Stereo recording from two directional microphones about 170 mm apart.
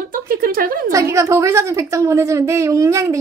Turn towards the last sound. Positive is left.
turn(degrees=-15)  # may be behind; listen again after turning